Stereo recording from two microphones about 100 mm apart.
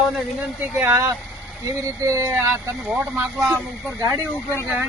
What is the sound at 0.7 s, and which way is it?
Speech, 25° right (ahead or behind).